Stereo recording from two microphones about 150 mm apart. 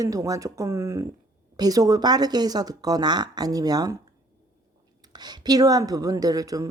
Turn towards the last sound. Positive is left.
turn(degrees=-25)  # may be behind; listen again after turning